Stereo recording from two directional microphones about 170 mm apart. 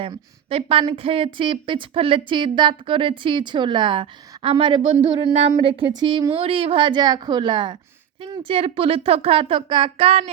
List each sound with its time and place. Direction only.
0.0 s a woman's voice: 35° right (ahead or behind)